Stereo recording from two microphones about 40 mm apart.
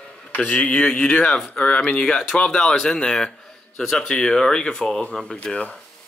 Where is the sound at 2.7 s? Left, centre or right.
Centre.